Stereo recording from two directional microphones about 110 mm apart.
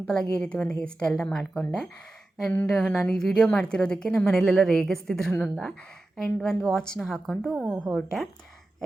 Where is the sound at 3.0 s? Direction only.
5° left (ahead or behind).